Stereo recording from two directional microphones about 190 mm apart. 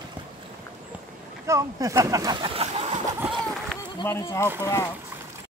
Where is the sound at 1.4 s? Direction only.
15° right (ahead or behind); by 3.0 s 35° right (ahead or behind).